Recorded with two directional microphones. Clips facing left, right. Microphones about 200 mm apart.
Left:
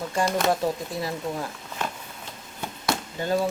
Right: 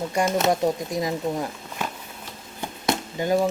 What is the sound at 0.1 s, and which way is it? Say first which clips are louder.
Speech: right 1 dB; 20° right (ahead or behind).